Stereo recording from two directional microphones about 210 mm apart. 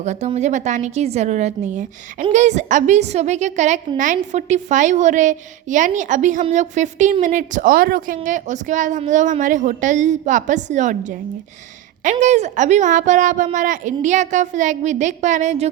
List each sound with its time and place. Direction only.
0.0 s a woman's voice: 35° right (ahead or behind)
12.2 s a woman's voice: 35° right (ahead or behind)